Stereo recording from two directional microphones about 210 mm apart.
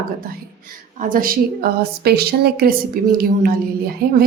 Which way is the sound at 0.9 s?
40° right (ahead or behind).